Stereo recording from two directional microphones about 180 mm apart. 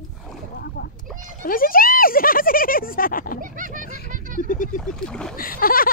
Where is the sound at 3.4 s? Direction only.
50° right (ahead or behind).